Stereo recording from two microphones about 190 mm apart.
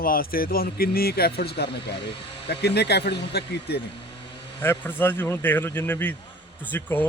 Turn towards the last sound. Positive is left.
turn(degrees=10)  # may be behind; listen again after turning